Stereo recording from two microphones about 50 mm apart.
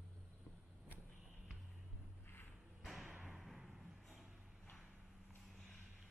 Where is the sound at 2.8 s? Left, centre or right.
Centre.